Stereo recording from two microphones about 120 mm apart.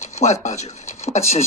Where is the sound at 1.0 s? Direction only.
65° left (ahead or behind).